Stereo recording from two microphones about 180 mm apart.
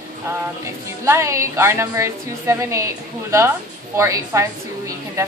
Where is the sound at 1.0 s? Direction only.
15° right (ahead or behind).